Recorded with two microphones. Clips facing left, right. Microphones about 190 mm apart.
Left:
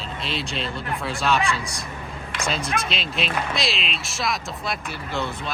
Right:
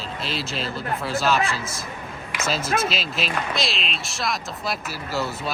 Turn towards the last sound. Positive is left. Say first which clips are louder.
# right 1 dB
turn(degrees=-5)  # may be behind; listen again after turning